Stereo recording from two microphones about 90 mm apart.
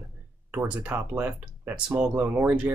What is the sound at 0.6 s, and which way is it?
Speech, 15° right (ahead or behind).